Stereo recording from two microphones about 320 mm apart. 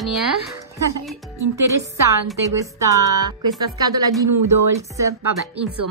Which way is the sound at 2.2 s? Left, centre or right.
Centre.